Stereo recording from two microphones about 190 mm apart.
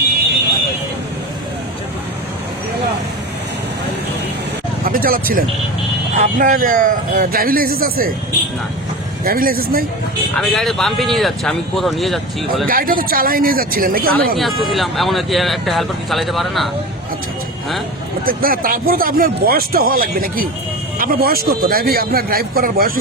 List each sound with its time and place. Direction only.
4.9 s speech: 50° right (ahead or behind)
9.2 s speech: 50° right (ahead or behind)
10.3 s speech: centre (ahead or behind)
12.6 s speech: 50° right (ahead or behind)
14.3 s speech: centre (ahead or behind)
18.3 s speech: 50° right (ahead or behind)